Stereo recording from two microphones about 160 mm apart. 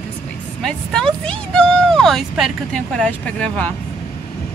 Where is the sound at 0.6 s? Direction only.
5° left (ahead or behind).